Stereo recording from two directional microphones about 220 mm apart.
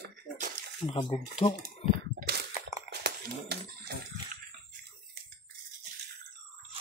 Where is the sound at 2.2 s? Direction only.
45° right (ahead or behind).